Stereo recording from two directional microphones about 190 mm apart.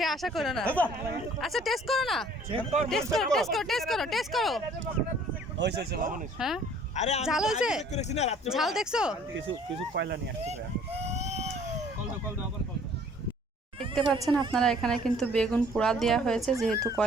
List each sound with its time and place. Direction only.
0.0 s speech: centre (ahead or behind)
5.5 s speech: 65° right (ahead or behind)
6.4 s speech: 5° right (ahead or behind)
6.9 s speech: 35° left (ahead or behind)
7.3 s speech: 5° right (ahead or behind)
7.9 s speech: 35° left (ahead or behind)
8.4 s speech: centre (ahead or behind)
9.9 s speech: 60° right (ahead or behind)
10.4 s vehicle: 35° right (ahead or behind)
13.7 s cat: centre (ahead or behind)
14.2 s speech: 25° right (ahead or behind)
14.5 s speech: centre (ahead or behind)